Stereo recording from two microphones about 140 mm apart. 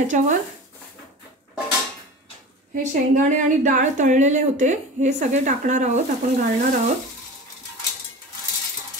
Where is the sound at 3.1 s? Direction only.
70° right (ahead or behind).